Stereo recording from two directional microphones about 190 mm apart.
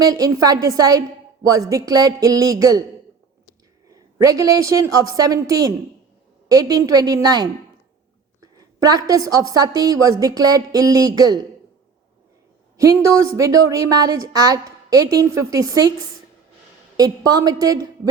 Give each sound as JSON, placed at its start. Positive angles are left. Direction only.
{"t": 0.0, "sound": "a woman's voice", "side_deg": -20}
{"t": 3.8, "sound": "a woman's voice", "side_deg": -20}
{"t": 12.7, "sound": "a woman's voice", "side_deg": -15}
{"t": 17.0, "sound": "a woman's voice", "side_deg": -20}